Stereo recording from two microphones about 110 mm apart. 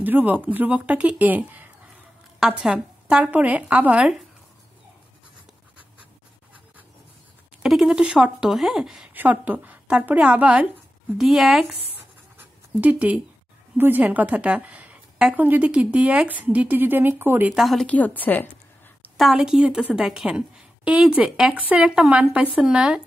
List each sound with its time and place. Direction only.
0.0 s a woman's voice: 15° right (ahead or behind)
7.6 s speech: 5° right (ahead or behind)
9.1 s a woman's voice: 15° right (ahead or behind)
12.4 s a sound: 15° right (ahead or behind)
13.7 s a woman's voice: 15° right (ahead or behind)
17.5 s speech: centre (ahead or behind)
17.8 s a woman's voice: 15° left (ahead or behind)
19.1 s a woman's voice: 5° right (ahead or behind)